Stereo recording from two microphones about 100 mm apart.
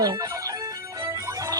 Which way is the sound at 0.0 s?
35° right (ahead or behind).